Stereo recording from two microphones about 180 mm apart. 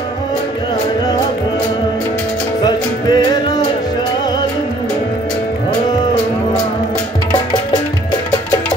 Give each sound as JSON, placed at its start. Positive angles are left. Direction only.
{"t": 2.6, "sound": "music", "side_deg": 25}